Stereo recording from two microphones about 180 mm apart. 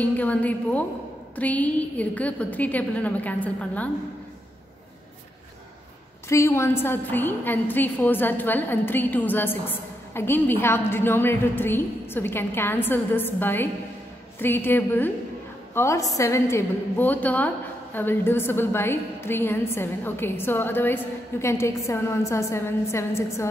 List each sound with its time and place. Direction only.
0.0 s a woman's voice: 10° left (ahead or behind)
6.2 s a woman's voice: 15° left (ahead or behind)